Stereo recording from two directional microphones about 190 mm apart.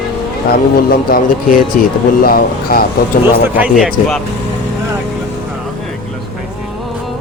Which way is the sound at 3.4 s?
10° right (ahead or behind).